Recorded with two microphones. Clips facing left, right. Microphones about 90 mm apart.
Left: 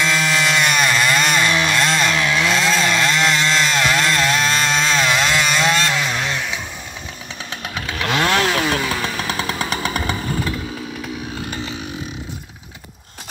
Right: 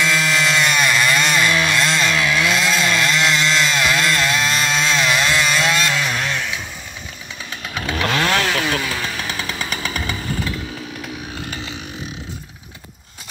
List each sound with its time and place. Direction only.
0.0 s a sound: 30° left (ahead or behind)
0.4 s chainsaw: centre (ahead or behind)
0.7 s chainsaw: 30° left (ahead or behind)
8.1 s chainsaw: 10° left (ahead or behind)
8.4 s motorcycle: 20° left (ahead or behind)
9.5 s chainsaw: 45° left (ahead or behind)